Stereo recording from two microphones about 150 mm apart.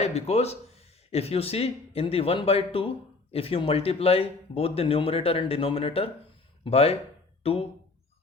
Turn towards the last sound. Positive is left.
turn(degrees=40)  # may be behind; listen again after turning